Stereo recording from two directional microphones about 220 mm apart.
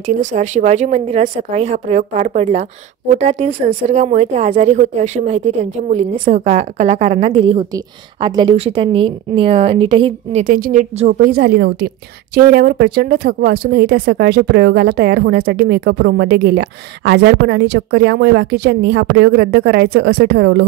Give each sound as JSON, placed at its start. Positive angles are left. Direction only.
{"t": 0.3, "sound": "speech", "side_deg": -35}
{"t": 10.4, "sound": "speech", "side_deg": -40}